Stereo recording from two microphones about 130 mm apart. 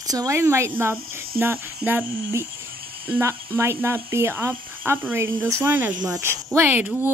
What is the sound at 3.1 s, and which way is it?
A child's voice, 20° right (ahead or behind).